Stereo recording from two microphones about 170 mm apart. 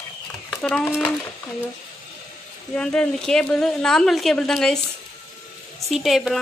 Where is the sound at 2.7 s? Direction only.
5° left (ahead or behind).